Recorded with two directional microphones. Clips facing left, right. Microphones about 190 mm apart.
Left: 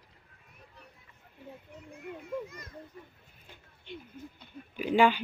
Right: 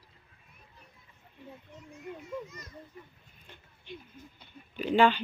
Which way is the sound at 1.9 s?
55° left (ahead or behind).